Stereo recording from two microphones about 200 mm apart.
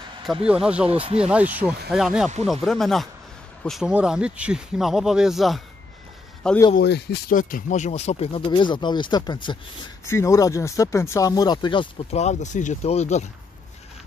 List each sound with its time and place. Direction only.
0.5 s speech: 5° right (ahead or behind)
0.8 s speech: 30° right (ahead or behind)
1.2 s speech: 5° right (ahead or behind)
6.8 s speech: 55° left (ahead or behind); by 13.3 s 35° left (ahead or behind)